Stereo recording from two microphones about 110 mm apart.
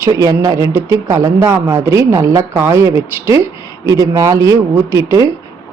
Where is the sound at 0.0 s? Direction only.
30° right (ahead or behind).